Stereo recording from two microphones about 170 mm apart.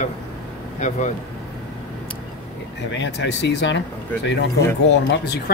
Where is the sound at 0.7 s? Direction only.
45° left (ahead or behind).